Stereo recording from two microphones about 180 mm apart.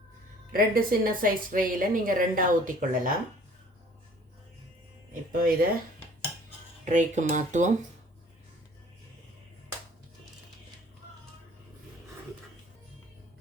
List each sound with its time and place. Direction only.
0.5 s a woman's voice: 55° right (ahead or behind)
5.3 s speech: 50° right (ahead or behind)
6.8 s a woman's voice: 40° right (ahead or behind)